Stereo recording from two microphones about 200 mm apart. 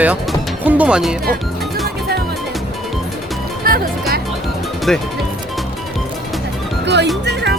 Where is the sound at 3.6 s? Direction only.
45° right (ahead or behind).